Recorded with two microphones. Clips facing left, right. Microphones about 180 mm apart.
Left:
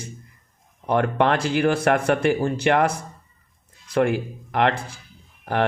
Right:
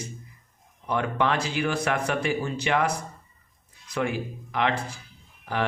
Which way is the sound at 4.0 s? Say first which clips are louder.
Left 7 dB; 60° left (ahead or behind).